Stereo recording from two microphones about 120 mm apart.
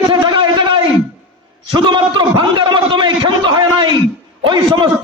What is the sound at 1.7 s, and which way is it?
A man's voice, 40° right (ahead or behind).